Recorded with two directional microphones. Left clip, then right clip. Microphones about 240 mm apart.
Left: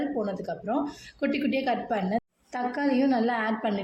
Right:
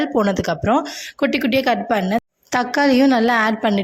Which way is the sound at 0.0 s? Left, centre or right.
Right.